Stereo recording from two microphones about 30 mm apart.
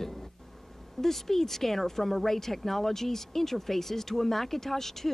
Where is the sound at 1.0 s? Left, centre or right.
Centre.